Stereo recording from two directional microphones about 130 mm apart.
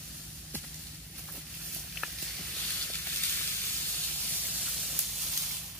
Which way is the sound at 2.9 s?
15° left (ahead or behind).